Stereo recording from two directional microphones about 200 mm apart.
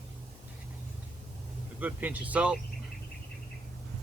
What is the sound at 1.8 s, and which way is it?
Speech, 10° right (ahead or behind).